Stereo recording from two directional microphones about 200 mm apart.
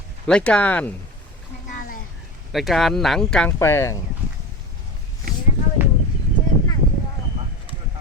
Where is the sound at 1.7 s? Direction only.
45° left (ahead or behind).